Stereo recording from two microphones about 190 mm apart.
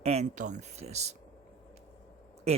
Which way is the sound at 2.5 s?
35° right (ahead or behind).